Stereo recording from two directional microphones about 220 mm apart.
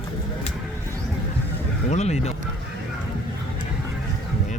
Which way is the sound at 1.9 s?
30° left (ahead or behind).